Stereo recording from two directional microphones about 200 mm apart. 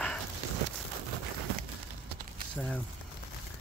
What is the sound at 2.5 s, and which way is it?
Speech, 5° left (ahead or behind).